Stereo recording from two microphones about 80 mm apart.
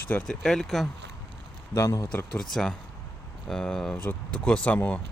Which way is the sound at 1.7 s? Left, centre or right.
Left.